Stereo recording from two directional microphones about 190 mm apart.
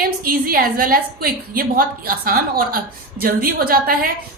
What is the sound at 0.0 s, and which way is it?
A woman's voice, 50° right (ahead or behind).